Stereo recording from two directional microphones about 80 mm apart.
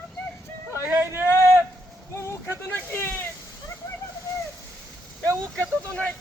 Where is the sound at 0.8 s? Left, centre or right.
Right.